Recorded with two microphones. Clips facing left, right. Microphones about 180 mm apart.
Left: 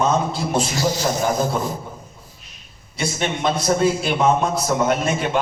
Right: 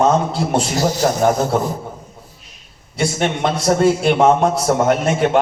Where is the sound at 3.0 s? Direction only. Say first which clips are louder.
Right 4 dB; 70° right (ahead or behind).